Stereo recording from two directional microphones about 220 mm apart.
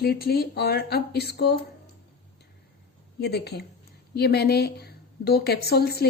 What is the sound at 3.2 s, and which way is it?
A woman's voice, 50° left (ahead or behind).